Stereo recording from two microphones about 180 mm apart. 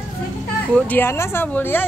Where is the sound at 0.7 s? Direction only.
10° left (ahead or behind).